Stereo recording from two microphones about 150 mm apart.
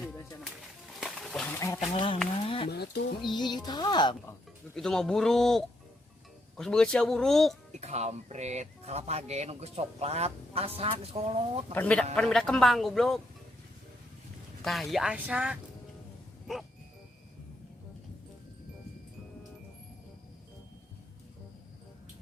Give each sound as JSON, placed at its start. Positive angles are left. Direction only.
{"t": 0.0, "sound": "a sound", "side_deg": 0}
{"t": 1.5, "sound": "speech", "side_deg": 20}
{"t": 1.9, "sound": "speech", "side_deg": 40}
{"t": 2.4, "sound": "a sound", "side_deg": 35}
{"t": 2.6, "sound": "speech", "side_deg": 90}
{"t": 3.2, "sound": "speech", "side_deg": 30}
{"t": 4.7, "sound": "a man's voice", "side_deg": 5}
{"t": 7.8, "sound": "speech", "side_deg": -45}
{"t": 11.7, "sound": "a man's voice", "side_deg": 10}
{"t": 14.6, "sound": "a man's voice", "side_deg": 0}